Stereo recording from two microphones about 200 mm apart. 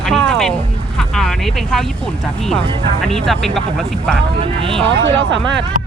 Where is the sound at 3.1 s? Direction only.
Centre (ahead or behind).